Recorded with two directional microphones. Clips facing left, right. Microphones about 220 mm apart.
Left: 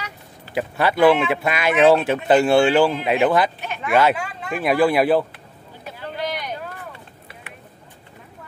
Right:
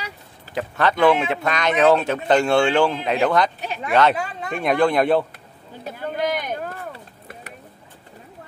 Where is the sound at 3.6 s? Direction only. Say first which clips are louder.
Even; 35° right (ahead or behind).